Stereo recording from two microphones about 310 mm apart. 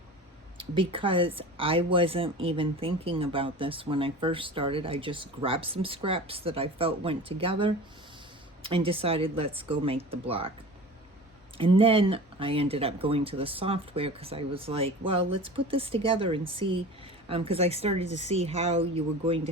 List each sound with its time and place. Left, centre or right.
0.5 s speech: centre
11.5 s speech: centre